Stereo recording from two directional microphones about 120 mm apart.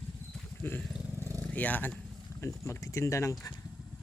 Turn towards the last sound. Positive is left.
turn(degrees=25)  # may be behind; listen again after turning